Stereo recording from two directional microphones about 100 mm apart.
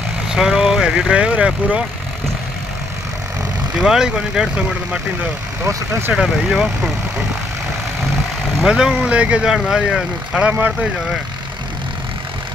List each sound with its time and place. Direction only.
0.3 s speech: 5° right (ahead or behind)
3.8 s speech: 5° right (ahead or behind)
5.7 s speech: 30° right (ahead or behind)
6.1 s speech: 5° right (ahead or behind)
8.6 s speech: 5° right (ahead or behind)